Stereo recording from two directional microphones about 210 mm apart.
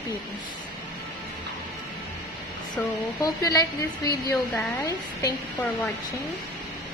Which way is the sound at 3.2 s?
15° left (ahead or behind).